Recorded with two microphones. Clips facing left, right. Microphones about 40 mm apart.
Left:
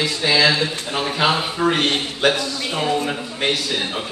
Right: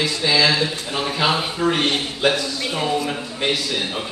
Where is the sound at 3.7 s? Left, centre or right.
Centre.